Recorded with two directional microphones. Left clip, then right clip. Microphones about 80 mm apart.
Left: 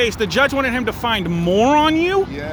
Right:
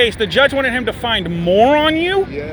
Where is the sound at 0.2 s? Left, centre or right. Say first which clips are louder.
Right 3 dB; left.